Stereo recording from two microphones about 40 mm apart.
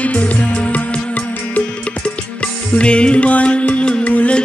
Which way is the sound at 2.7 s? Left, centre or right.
Left.